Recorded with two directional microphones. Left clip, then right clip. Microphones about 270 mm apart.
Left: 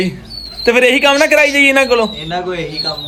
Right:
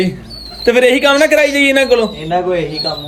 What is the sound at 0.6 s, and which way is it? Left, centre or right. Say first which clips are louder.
Speech: even; centre.